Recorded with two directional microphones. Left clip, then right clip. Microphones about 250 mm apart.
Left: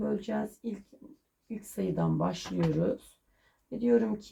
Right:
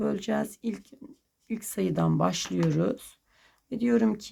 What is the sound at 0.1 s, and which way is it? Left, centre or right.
Speech, right.